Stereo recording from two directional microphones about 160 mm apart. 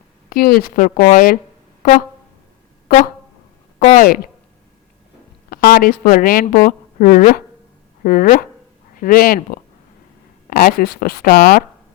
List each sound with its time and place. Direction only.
0.3 s speech: 70° left (ahead or behind)
1.8 s a sound: 60° left (ahead or behind)
3.8 s speech: 55° left (ahead or behind)
5.5 s speech: 70° left (ahead or behind)